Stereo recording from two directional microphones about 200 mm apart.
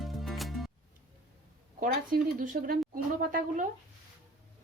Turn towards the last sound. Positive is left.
turn(degrees=-40)  # may be behind; listen again after turning